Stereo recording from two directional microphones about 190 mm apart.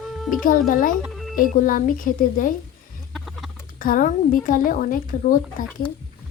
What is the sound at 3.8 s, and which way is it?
A woman's voice, 45° left (ahead or behind).